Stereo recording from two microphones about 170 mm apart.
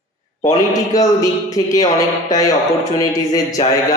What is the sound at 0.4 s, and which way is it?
A man's voice, 20° left (ahead or behind).